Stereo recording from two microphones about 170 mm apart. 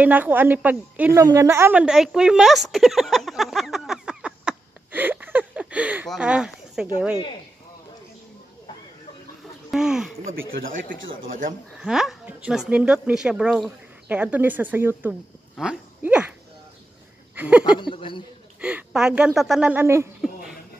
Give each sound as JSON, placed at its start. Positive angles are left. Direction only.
{"t": 0.0, "sound": "speech", "side_deg": -10}
{"t": 1.2, "sound": "a sound", "side_deg": -15}
{"t": 6.0, "sound": "speech", "side_deg": -5}
{"t": 9.7, "sound": "speech", "side_deg": -5}
{"t": 10.2, "sound": "speech", "side_deg": -55}
{"t": 11.8, "sound": "speech", "side_deg": -5}
{"t": 17.4, "sound": "a sound", "side_deg": -10}
{"t": 17.6, "sound": "speech", "side_deg": 30}
{"t": 18.6, "sound": "speech", "side_deg": -5}